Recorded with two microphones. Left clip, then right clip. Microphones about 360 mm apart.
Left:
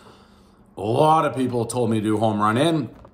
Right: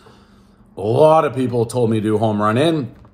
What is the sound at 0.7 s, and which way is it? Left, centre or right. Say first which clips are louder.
Speech: right 5 dB; centre.